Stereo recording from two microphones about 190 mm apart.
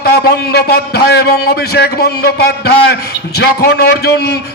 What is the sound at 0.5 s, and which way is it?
A man's voice, 60° left (ahead or behind).